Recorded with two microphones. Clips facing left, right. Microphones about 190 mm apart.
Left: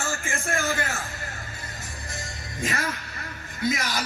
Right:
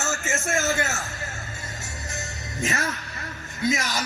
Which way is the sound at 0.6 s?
25° right (ahead or behind).